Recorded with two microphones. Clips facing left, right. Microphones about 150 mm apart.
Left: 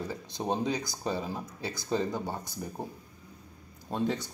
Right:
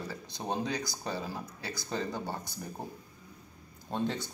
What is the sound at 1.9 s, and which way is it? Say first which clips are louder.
Speech: left 4 dB; 10° left (ahead or behind).